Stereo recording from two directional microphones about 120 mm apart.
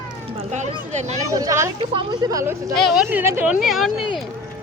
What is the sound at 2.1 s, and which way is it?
Speech, 30° right (ahead or behind).